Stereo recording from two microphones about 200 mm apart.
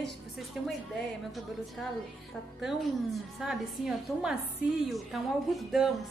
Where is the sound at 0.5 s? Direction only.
Centre (ahead or behind).